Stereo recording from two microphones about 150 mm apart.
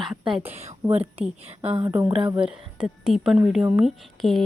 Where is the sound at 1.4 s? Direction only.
45° right (ahead or behind).